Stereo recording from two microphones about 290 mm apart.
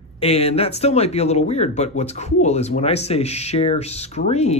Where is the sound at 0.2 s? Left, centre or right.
Left.